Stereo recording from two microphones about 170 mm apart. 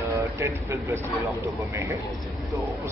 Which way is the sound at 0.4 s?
15° right (ahead or behind).